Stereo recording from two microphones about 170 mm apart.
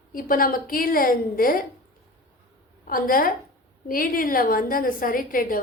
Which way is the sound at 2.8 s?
55° left (ahead or behind).